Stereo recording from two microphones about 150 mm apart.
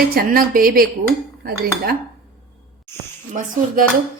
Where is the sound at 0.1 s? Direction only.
80° right.